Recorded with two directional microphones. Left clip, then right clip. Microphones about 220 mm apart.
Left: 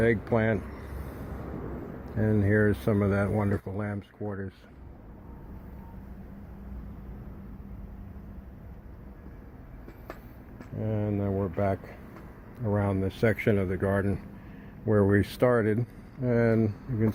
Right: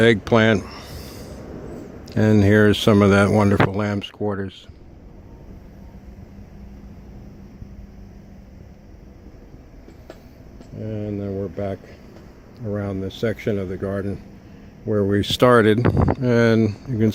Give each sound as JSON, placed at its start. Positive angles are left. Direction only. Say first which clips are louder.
{"t": 0.0, "sound": "speech", "louder": "right 10 dB", "side_deg": -40}
{"t": 2.0, "sound": "speech", "louder": "right 10 dB", "side_deg": -40}
{"t": 10.8, "sound": "speech", "louder": "right 3 dB", "side_deg": 0}
{"t": 15.4, "sound": "speech", "louder": "right 13 dB", "side_deg": -45}